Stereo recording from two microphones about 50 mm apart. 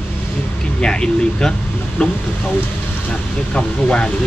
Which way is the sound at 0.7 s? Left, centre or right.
Centre.